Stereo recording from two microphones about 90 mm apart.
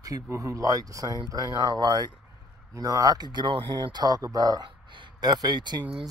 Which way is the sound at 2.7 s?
40° right (ahead or behind).